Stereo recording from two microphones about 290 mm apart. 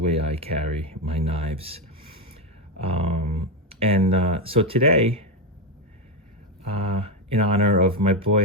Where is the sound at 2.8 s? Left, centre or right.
Centre.